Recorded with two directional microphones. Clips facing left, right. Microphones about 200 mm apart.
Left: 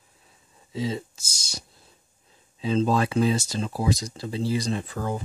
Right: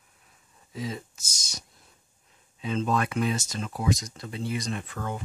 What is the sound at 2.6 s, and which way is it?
Speech, 30° left (ahead or behind).